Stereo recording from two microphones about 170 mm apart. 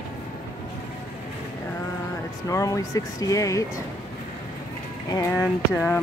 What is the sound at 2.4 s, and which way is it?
Speech, 20° left (ahead or behind).